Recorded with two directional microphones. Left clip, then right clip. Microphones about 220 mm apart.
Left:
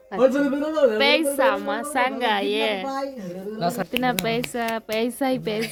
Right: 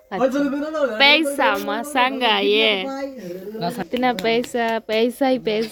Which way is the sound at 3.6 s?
45° left (ahead or behind).